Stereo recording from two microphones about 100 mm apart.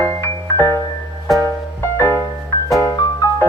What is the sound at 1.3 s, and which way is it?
Music, centre (ahead or behind).